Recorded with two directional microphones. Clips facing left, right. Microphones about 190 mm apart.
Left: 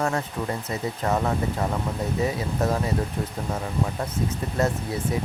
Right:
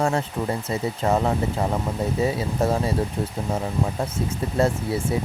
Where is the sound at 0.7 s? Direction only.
25° right (ahead or behind).